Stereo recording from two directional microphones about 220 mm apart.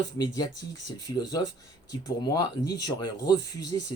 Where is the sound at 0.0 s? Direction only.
15° left (ahead or behind).